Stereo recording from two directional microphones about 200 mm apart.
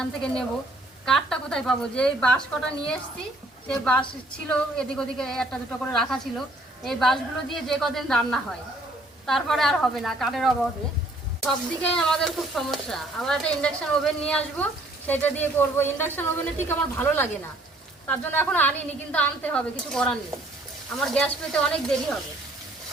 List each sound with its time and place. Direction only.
0.0 s a woman's voice: 5° left (ahead or behind)